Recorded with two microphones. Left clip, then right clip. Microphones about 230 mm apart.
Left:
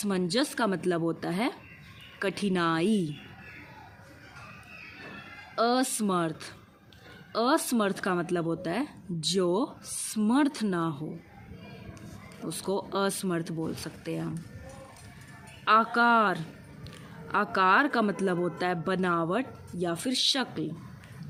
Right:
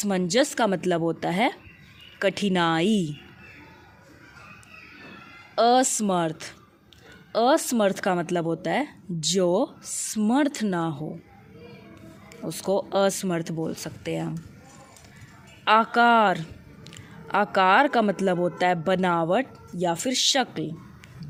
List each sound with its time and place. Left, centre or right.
0.0 s a woman's voice: right
5.5 s a woman's voice: right
12.5 s a woman's voice: right
15.6 s a woman's voice: right